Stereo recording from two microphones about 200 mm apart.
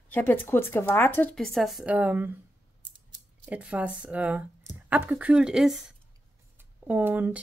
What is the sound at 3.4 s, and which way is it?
Speech, 5° right (ahead or behind).